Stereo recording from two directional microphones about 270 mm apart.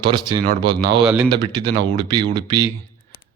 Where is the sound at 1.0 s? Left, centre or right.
Centre.